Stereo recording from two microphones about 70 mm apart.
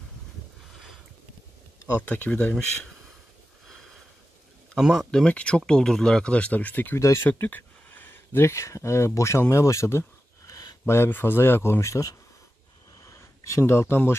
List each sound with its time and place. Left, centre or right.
2.0 s speech: left
4.7 s speech: centre
5.1 s speech: centre
7.0 s speech: left
7.2 s speech: left
10.4 s a sound: left
11.1 s speech: left
13.0 s a sound: left